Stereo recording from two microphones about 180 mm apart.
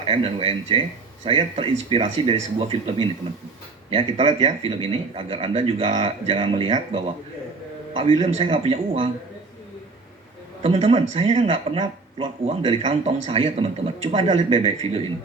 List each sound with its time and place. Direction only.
0.0 s a man's voice: 30° right (ahead or behind)
10.6 s a man's voice: 35° right (ahead or behind)